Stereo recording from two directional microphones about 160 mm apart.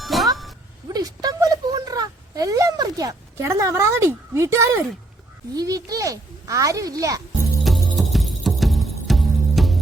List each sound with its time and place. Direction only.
0.0 s music: centre (ahead or behind)
0.9 s a sound: 25° right (ahead or behind)
5.5 s a child's voice: 20° right (ahead or behind)
7.9 s music: centre (ahead or behind)